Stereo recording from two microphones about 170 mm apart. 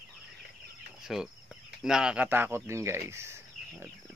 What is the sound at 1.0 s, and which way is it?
Speech, 5° right (ahead or behind).